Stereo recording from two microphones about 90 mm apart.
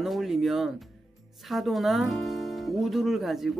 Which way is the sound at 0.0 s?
Centre (ahead or behind).